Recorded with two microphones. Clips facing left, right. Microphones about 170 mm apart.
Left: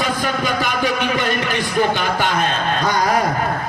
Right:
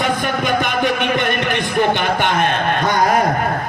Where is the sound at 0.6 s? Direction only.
55° right (ahead or behind).